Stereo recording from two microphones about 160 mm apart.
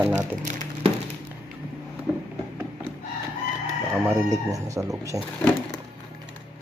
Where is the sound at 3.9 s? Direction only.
10° right (ahead or behind).